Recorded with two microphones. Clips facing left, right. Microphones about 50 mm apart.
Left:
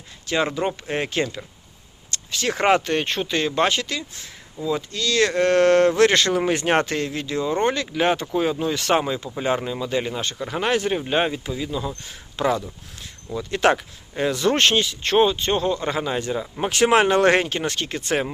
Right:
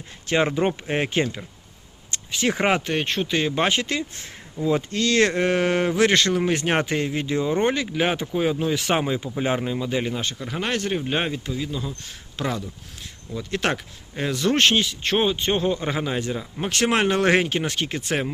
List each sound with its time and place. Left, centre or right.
0.3 s speech: right
2.0 s a sound: right
2.5 s speech: centre
3.5 s speech: centre
3.8 s speech: right
5.3 s speech: centre
6.8 s speech: centre